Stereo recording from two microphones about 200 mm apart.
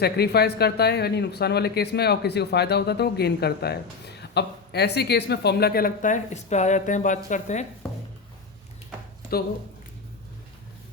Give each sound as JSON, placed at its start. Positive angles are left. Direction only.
{"t": 0.0, "sound": "speech", "side_deg": 55}